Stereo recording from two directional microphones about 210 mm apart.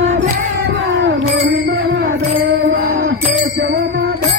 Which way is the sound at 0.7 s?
55° right (ahead or behind).